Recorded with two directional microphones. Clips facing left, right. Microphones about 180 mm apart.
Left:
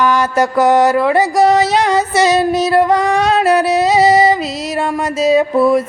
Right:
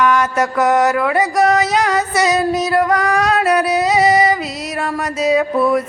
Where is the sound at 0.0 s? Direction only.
30° left (ahead or behind).